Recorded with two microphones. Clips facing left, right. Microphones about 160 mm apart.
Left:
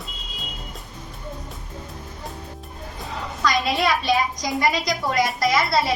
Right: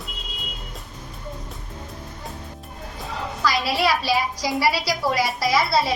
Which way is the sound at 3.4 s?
5° right (ahead or behind).